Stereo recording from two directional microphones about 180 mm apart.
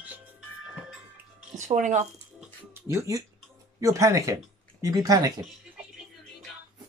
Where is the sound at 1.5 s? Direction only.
45° right (ahead or behind).